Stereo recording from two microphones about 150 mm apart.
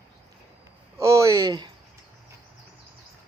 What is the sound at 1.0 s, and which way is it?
Speech, 20° right (ahead or behind).